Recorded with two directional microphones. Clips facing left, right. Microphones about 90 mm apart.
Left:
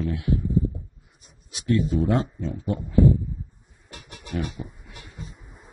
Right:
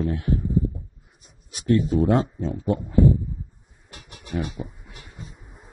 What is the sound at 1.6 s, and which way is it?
Speech, 40° right (ahead or behind).